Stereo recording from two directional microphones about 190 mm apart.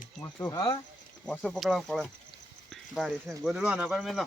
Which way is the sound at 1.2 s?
Centre (ahead or behind).